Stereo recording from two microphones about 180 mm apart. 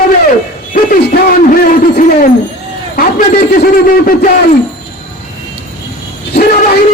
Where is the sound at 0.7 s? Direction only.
50° left (ahead or behind).